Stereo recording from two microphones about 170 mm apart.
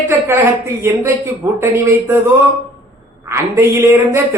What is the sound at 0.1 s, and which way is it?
Speech, 15° right (ahead or behind).